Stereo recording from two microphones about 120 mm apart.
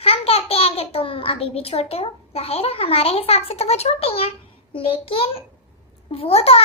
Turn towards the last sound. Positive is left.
turn(degrees=55)  # may be behind; listen again after turning